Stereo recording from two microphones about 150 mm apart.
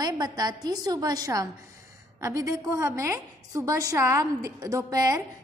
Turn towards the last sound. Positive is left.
turn(degrees=-25)  # may be behind; listen again after turning